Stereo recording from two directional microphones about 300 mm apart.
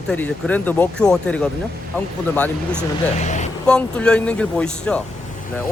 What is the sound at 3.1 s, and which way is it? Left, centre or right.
Speech, left.